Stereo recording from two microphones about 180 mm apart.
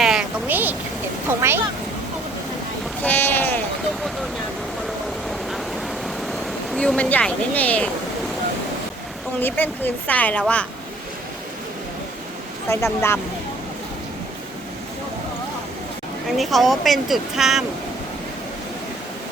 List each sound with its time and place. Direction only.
0.0 s a sound: 5° right (ahead or behind)
1.3 s speech: 15° right (ahead or behind)
3.0 s sheep: 10° left (ahead or behind)
6.7 s a woman's voice: 5° left (ahead or behind)
9.4 s a woman's voice: 10° left (ahead or behind)
12.6 s a woman's voice: 15° left (ahead or behind)
16.4 s speech: centre (ahead or behind)